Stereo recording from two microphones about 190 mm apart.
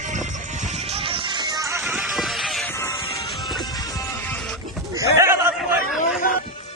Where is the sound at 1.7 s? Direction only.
Centre (ahead or behind).